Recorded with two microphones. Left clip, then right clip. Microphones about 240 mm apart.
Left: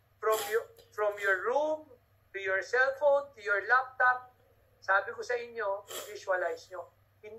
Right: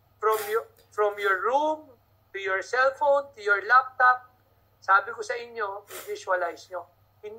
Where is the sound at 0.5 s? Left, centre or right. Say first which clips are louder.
Right 5 dB; right.